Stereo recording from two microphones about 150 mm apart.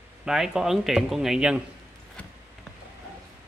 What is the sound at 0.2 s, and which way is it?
Speech, 5° right (ahead or behind).